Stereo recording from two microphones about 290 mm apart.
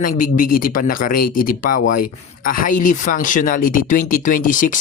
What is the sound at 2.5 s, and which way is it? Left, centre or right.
Speech, left.